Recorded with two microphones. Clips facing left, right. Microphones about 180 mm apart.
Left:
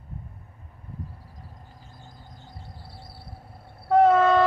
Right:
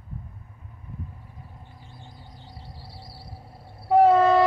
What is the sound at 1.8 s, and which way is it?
Vehicle, 45° left (ahead or behind).